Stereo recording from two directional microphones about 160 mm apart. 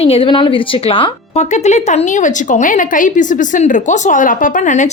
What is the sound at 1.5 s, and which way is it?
A woman's voice, 45° left (ahead or behind).